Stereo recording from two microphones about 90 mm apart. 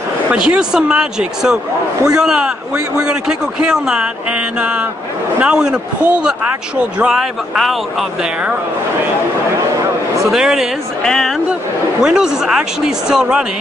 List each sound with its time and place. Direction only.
0.3 s a man's voice: 10° right (ahead or behind)
7.0 s speech: 5° right (ahead or behind)
10.3 s speech: 5° right (ahead or behind)
12.0 s a man's voice: 5° right (ahead or behind)